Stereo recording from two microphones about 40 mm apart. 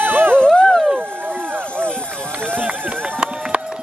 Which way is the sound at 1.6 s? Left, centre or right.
Left.